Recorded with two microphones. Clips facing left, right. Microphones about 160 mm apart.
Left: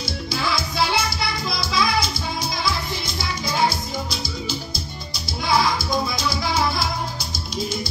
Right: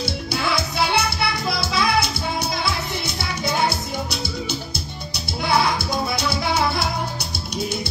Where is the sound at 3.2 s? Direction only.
65° right (ahead or behind).